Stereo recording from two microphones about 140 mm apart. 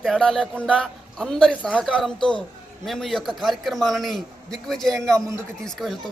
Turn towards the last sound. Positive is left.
turn(degrees=0)  # may be behind; listen again after turning